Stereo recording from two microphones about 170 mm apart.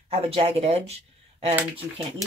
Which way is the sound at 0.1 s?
35° right (ahead or behind).